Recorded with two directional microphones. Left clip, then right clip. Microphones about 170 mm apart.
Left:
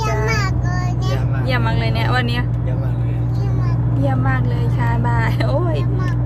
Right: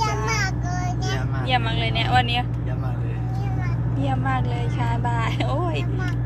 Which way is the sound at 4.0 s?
20° left (ahead or behind).